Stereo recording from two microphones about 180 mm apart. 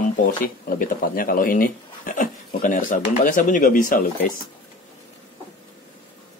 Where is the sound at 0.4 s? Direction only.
50° left (ahead or behind).